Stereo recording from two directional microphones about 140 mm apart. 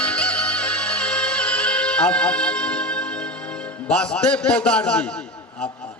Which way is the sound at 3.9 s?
5° left (ahead or behind).